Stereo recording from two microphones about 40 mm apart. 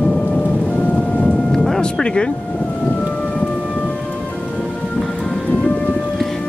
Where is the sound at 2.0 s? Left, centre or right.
Left.